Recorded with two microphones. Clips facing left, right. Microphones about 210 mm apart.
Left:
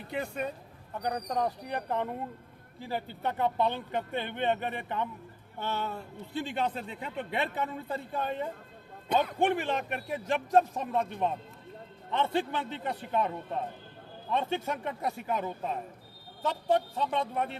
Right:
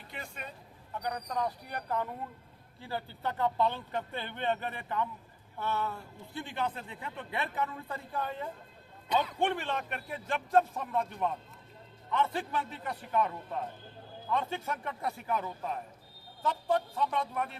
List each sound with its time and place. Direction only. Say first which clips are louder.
0.2 s speech: left 11 dB; 50° left (ahead or behind)
1.0 s speech: left 4 dB; 35° left (ahead or behind)
1.6 s a man's voice: left 3 dB; 25° left (ahead or behind)
9.0 s a man's voice: left 3 dB; 55° left (ahead or behind)
9.4 s a man's voice: left 4 dB; 15° left (ahead or behind)